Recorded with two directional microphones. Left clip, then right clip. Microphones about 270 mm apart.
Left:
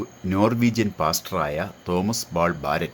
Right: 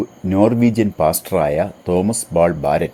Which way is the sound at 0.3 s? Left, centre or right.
Centre.